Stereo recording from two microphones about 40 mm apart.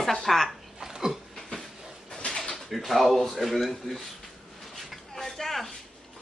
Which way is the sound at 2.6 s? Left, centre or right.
Centre.